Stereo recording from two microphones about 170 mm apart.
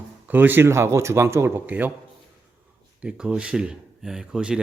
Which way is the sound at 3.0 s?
5° right (ahead or behind).